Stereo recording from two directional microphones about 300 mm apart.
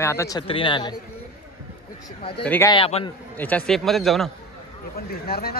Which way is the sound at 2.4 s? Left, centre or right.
Centre.